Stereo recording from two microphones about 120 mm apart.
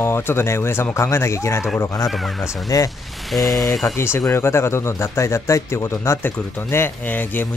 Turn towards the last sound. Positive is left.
turn(degrees=15)  # may be behind; listen again after turning